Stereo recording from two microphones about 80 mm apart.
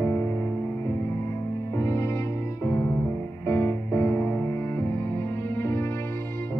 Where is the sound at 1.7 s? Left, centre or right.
Left.